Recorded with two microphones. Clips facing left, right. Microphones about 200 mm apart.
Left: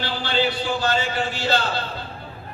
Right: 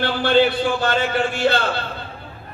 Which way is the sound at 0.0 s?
55° right (ahead or behind).